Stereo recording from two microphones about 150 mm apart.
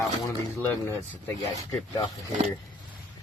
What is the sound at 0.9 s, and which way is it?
Speech, 15° left (ahead or behind).